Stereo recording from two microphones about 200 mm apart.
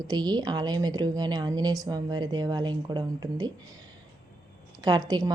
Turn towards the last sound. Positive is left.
turn(degrees=-20)  # may be behind; listen again after turning